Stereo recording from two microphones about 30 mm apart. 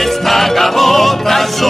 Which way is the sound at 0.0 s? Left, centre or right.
Centre.